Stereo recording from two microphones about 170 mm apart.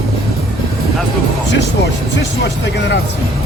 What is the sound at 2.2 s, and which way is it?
Speech, 90° left.